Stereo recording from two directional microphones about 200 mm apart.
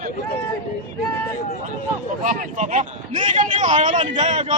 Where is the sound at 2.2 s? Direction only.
40° right (ahead or behind).